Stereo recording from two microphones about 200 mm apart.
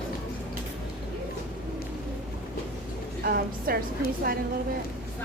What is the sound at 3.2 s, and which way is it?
Speech, 50° right (ahead or behind).